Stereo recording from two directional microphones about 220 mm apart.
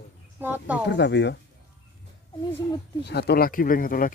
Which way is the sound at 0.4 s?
10° right (ahead or behind).